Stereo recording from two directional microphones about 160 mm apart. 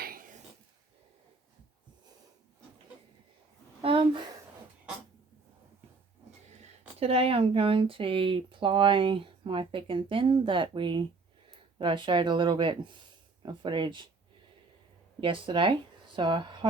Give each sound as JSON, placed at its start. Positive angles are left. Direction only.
{"t": 0.0, "sound": "dishes", "side_deg": -65}
{"t": 3.8, "sound": "a sound", "side_deg": -30}
{"t": 7.0, "sound": "speech", "side_deg": -40}
{"t": 15.2, "sound": "speech", "side_deg": -30}